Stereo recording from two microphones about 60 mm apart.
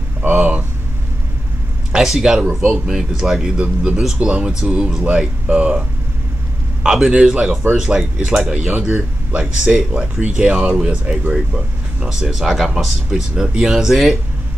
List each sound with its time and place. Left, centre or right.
0.2 s speech: right
1.9 s a man's voice: centre
2.4 s speech: centre
2.9 s speech: centre